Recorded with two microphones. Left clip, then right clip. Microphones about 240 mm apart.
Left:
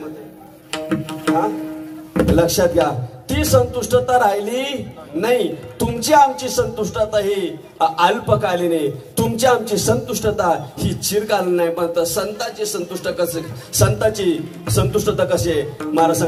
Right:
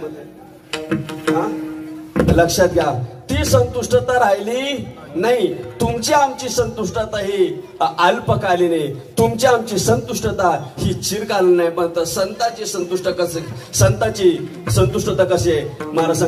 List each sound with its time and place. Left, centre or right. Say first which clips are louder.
0.7 s music: even; left
2.1 s a man's voice: right 1 dB; left